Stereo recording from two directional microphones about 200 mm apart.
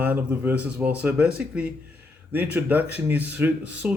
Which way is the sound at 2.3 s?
10° right (ahead or behind).